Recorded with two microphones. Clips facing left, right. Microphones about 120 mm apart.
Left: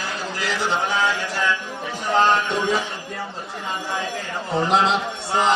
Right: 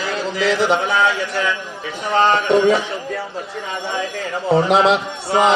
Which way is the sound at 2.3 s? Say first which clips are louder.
Right 7 dB; 80° right.